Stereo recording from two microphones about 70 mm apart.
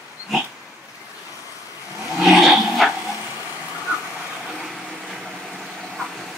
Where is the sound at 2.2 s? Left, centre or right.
Centre.